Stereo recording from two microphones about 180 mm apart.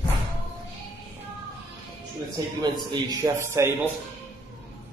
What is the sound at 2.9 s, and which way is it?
A man's voice, 20° right (ahead or behind).